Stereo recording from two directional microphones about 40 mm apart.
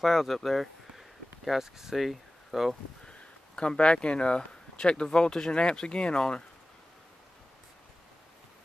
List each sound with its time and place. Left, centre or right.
0.0 s speech: centre
3.1 s speech: left